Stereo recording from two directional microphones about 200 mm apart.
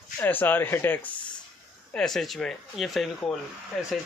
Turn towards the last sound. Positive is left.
turn(degrees=0)  # may be behind; listen again after turning